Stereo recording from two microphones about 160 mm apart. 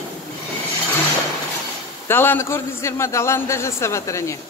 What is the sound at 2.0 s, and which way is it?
Speech, 15° left (ahead or behind).